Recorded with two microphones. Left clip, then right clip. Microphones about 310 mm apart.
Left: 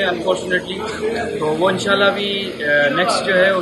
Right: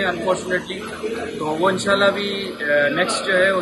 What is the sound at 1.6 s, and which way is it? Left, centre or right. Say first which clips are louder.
Speech: left 1 dB; centre.